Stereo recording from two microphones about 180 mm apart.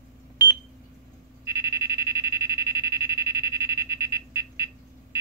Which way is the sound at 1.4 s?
15° right (ahead or behind).